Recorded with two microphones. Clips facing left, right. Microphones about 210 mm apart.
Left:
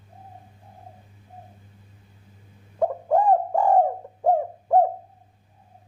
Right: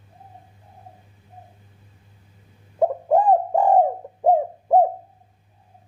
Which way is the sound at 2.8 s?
20° right (ahead or behind).